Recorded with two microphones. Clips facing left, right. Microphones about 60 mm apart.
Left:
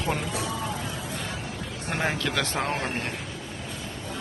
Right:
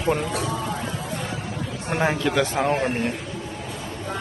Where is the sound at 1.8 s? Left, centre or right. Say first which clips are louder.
Right 5 dB; centre.